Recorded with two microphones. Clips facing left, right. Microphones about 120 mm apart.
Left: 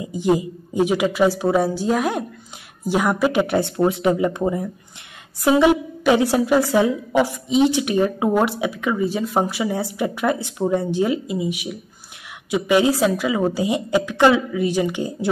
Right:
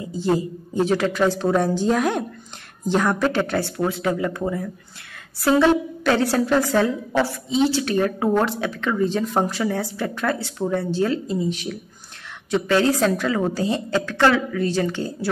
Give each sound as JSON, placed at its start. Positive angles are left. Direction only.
{"t": 0.0, "sound": "a woman's voice", "side_deg": 15}